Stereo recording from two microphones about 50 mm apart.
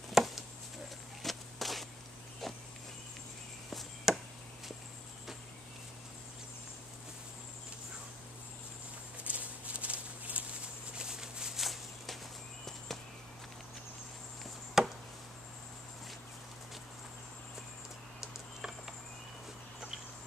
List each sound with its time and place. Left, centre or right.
0.1 s chopping: centre
1.2 s walk: centre
2.4 s insect: centre
4.1 s a sound: centre
9.2 s a sound: right
11.0 s a sound: centre
12.6 s walk: centre
14.8 s chop: centre
18.2 s typing: centre